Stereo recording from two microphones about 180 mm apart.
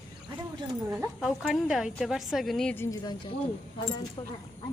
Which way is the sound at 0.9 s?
Centre (ahead or behind).